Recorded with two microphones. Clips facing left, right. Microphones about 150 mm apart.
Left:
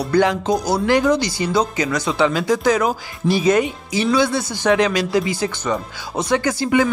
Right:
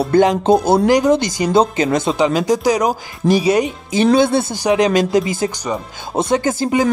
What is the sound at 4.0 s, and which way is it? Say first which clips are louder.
Speech: right 5 dB; 50° right (ahead or behind).